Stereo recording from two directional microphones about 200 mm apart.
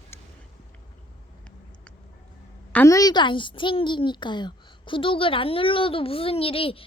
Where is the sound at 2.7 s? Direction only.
15° left (ahead or behind).